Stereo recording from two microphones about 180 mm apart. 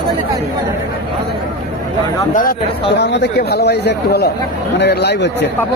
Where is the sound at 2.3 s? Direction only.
50° left (ahead or behind).